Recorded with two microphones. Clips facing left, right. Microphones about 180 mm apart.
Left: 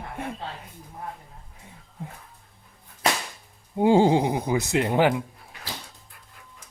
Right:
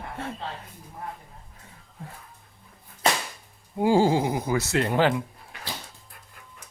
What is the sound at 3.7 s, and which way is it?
Speech, 20° left (ahead or behind).